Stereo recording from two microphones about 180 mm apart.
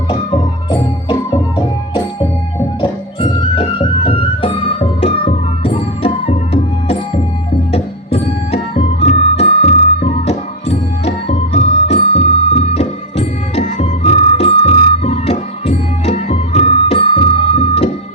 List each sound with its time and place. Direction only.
0.1 s music: 30° left (ahead or behind)